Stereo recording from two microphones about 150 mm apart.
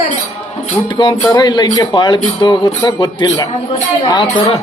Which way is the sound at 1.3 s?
30° left (ahead or behind).